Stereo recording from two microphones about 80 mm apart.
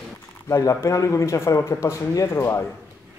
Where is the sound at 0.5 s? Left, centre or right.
Left.